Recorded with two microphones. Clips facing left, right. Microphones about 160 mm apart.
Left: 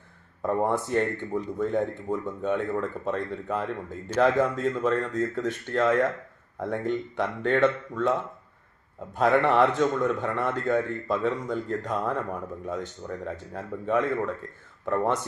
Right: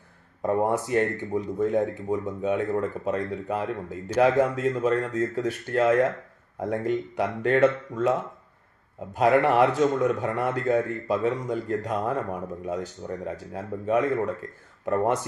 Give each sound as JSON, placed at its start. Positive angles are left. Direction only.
{"t": 0.4, "sound": "speech", "side_deg": -15}
{"t": 9.1, "sound": "speech", "side_deg": -10}